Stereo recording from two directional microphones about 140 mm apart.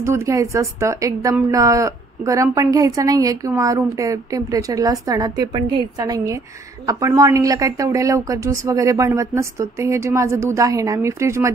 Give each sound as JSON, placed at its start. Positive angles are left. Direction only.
{"t": 0.0, "sound": "a woman's voice", "side_deg": -20}